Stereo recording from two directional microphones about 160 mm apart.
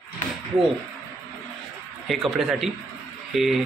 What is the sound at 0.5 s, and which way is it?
Speech, 5° right (ahead or behind).